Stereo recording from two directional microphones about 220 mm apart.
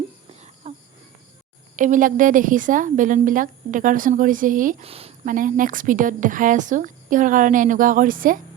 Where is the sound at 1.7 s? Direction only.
35° right (ahead or behind).